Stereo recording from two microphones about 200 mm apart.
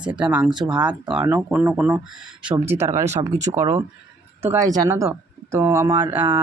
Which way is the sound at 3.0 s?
35° right (ahead or behind).